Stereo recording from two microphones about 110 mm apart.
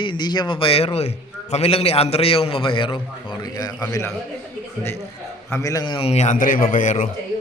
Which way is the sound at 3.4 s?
35° left (ahead or behind).